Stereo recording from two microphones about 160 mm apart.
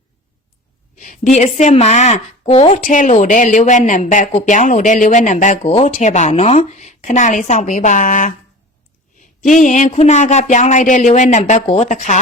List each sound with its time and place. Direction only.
0.9 s speech: 55° left (ahead or behind)
2.8 s speech: 55° left (ahead or behind)
9.4 s speech: 50° left (ahead or behind)
11.6 s speech: 30° left (ahead or behind)
11.9 s speech: 50° left (ahead or behind)